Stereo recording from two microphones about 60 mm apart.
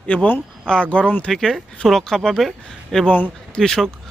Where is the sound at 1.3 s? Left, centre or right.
Centre.